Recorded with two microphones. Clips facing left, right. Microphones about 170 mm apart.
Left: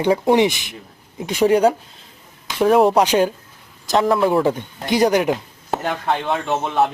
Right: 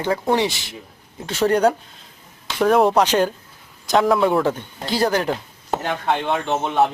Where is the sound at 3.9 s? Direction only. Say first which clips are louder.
Even; centre (ahead or behind).